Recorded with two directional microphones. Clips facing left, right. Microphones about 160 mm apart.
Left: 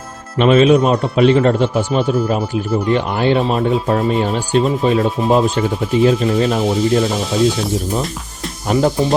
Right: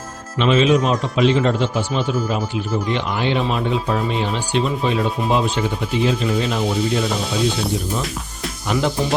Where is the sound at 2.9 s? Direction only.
45° left (ahead or behind).